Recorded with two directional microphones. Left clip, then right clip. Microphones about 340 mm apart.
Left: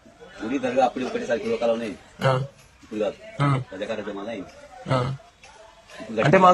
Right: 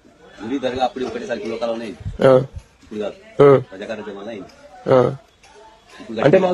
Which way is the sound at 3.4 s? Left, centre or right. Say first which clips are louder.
Right 15 dB; centre.